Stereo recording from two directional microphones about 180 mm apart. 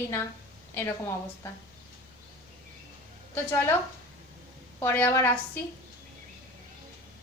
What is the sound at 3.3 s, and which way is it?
Speech, 10° left (ahead or behind).